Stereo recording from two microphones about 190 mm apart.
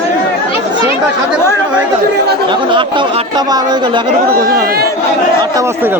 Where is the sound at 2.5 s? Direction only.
25° right (ahead or behind).